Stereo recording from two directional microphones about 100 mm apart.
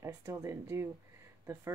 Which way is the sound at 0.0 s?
30° right (ahead or behind).